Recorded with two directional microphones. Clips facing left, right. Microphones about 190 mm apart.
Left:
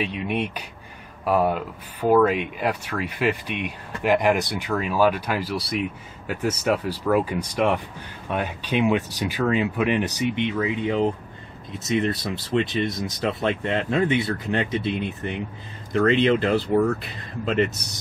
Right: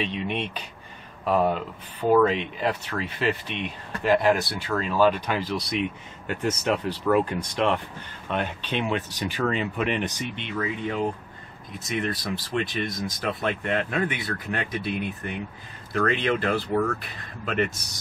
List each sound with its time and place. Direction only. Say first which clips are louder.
0.0 s speech: left 3 dB; 10° left (ahead or behind); by 16.8 s 25° left (ahead or behind)